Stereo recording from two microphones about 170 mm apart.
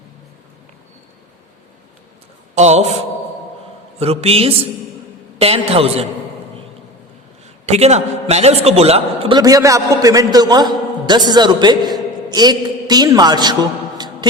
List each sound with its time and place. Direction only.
2.6 s a man's voice: 40° right (ahead or behind)
4.0 s a man's voice: 35° right (ahead or behind)
7.7 s a man's voice: 40° right (ahead or behind)
9.4 s a man's voice: 20° right (ahead or behind)